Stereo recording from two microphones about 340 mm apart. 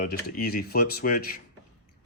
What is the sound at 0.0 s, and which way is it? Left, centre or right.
Speech, left.